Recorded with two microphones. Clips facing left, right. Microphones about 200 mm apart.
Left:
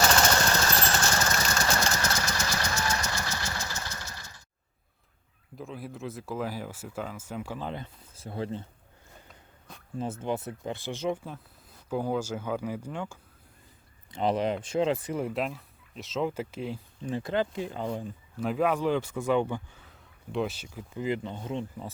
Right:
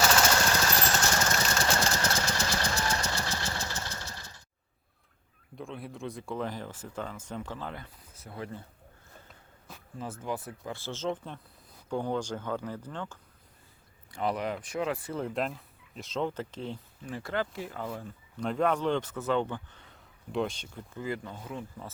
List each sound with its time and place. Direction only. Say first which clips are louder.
0.0 s jackhammer: left 1 dB; 5° right (ahead or behind)
1.0 s vehicle: left 1 dB; 10° right (ahead or behind)
2.0 s vehicle: even; 30° right (ahead or behind)
3.8 s engine: even; 30° right (ahead or behind)
5.5 s speech: left 1 dB; centre (ahead or behind); by 8.6 s 25° left (ahead or behind)
10.0 s speech: left 4 dB; 25° left (ahead or behind)
14.1 s speech: left 4 dB; 25° left (ahead or behind)
15.3 s speech: left 1 dB; centre (ahead or behind)
17.0 s speech: left 5 dB; 20° left (ahead or behind)
18.3 s speech: left 1 dB; 5° left (ahead or behind)
21.0 s speech: left 5 dB; 20° left (ahead or behind)